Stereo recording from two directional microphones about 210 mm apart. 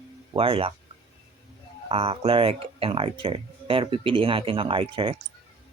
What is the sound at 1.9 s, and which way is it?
Speech, 25° right (ahead or behind).